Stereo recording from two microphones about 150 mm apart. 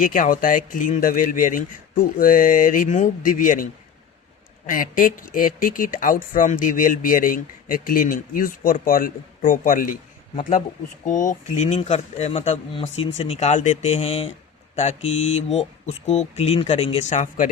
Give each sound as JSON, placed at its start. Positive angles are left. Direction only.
{"t": 0.0, "sound": "speech", "side_deg": 65}
{"t": 11.0, "sound": "speech", "side_deg": 60}
{"t": 17.2, "sound": "speech", "side_deg": 60}